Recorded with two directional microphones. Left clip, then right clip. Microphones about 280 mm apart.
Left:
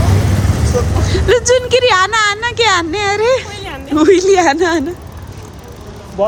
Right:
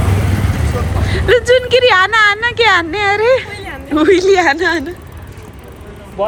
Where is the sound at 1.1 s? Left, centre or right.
Centre.